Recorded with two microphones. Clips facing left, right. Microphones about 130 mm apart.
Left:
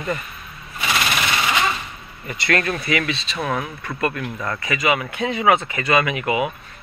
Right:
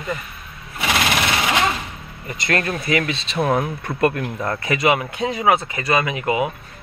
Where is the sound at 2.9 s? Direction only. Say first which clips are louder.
Right 2 dB; 40° right (ahead or behind).